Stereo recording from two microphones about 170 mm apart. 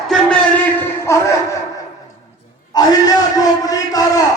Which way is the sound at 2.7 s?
25° left (ahead or behind).